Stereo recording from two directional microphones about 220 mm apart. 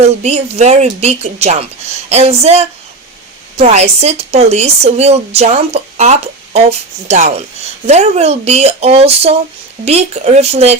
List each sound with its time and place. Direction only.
0.0 s speech: 30° right (ahead or behind)